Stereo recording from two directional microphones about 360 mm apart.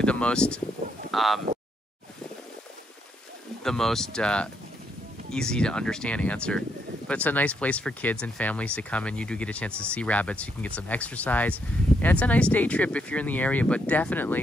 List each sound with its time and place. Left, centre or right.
0.0 s speech: centre
0.8 s a sound: right
1.1 s speech: centre
3.6 s speech: centre